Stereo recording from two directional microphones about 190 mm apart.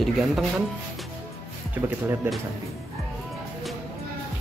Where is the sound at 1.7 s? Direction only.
10° right (ahead or behind).